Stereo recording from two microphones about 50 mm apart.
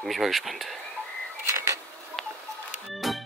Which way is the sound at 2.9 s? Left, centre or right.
Centre.